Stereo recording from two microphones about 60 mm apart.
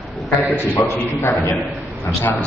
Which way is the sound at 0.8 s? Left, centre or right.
Left.